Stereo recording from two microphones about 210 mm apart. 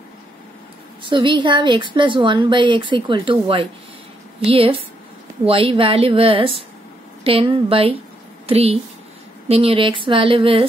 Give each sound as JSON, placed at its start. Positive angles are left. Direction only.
{"t": 1.0, "sound": "a woman's voice", "side_deg": -20}